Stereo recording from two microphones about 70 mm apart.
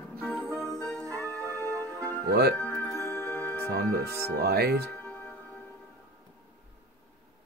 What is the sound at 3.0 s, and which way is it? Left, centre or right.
Music, left.